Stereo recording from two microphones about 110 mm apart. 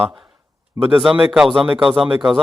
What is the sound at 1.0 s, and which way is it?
Speech, 5° right (ahead or behind).